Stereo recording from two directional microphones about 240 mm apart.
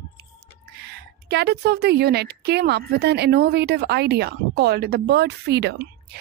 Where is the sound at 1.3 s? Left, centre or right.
Right.